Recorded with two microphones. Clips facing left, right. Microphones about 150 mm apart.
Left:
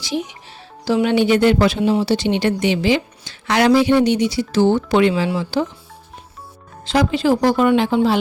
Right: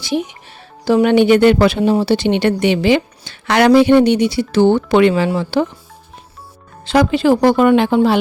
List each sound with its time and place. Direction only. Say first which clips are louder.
0.9 s a woman's voice: right 5 dB; 55° right (ahead or behind)
6.8 s a woman's voice: right 4 dB; 65° right (ahead or behind)